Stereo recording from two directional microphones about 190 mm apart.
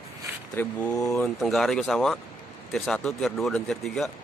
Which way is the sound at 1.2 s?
Centre (ahead or behind).